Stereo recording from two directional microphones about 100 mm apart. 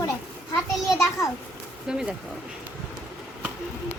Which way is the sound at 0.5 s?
25° left (ahead or behind).